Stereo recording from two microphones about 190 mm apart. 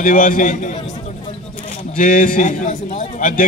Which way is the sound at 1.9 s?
45° left (ahead or behind).